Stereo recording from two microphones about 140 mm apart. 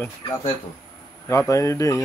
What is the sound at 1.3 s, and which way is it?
Speech, 20° left (ahead or behind).